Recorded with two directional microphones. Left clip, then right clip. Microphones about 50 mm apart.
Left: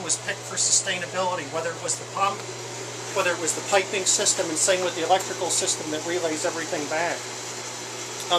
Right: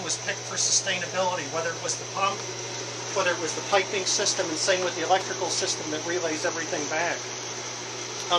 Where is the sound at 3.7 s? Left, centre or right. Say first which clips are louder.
Left 2 dB; left.